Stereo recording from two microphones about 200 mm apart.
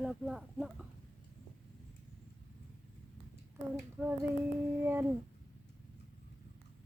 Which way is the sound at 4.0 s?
5° right (ahead or behind).